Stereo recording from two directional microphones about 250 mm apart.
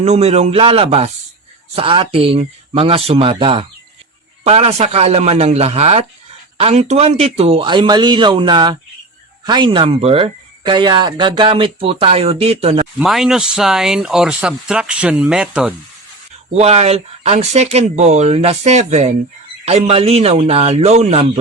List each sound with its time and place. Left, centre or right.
0.0 s speech: right
13.0 s speech: centre
16.6 s speech: right